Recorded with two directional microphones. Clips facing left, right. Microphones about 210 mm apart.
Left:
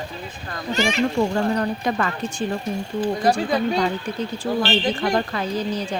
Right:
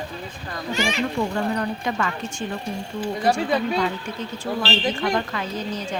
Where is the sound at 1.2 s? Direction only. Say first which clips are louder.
Left 3 dB; 40° left (ahead or behind).